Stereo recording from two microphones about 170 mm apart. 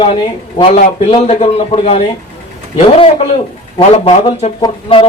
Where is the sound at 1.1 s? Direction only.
35° left (ahead or behind).